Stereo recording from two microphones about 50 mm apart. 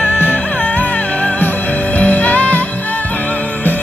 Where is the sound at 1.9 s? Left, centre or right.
Left.